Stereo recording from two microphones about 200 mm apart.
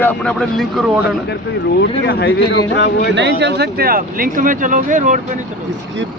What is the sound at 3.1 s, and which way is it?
Speech, 60° right (ahead or behind).